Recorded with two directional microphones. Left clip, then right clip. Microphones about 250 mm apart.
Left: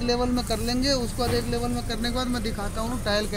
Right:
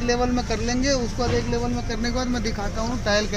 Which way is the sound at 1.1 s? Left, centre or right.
Centre.